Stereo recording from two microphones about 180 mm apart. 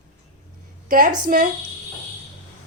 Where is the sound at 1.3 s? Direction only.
55° right (ahead or behind).